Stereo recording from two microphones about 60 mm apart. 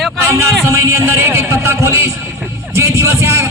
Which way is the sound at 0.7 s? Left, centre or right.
Right.